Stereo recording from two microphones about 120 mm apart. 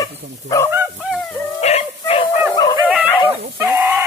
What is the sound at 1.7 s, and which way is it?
Dog, 65° left (ahead or behind).